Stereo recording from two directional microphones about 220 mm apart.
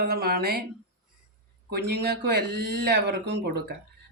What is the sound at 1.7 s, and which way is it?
Speech, 50° right (ahead or behind).